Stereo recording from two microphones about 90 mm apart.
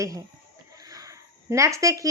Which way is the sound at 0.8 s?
40° right (ahead or behind).